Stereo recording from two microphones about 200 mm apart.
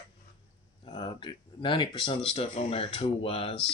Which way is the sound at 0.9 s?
25° left (ahead or behind).